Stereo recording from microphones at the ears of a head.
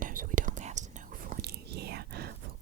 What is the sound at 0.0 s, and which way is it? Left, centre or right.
Whispering, right.